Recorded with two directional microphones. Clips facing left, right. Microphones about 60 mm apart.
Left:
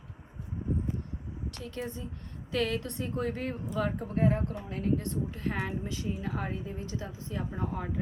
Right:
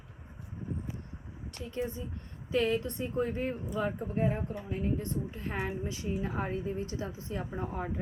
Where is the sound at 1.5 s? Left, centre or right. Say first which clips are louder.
Right 4 dB; centre.